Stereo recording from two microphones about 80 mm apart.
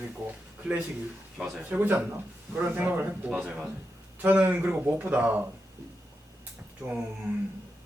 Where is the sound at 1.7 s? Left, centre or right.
Right.